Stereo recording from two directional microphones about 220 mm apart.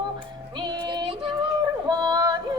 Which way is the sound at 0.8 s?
20° right (ahead or behind).